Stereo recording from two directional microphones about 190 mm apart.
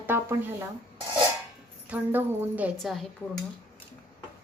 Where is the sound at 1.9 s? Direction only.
10° right (ahead or behind).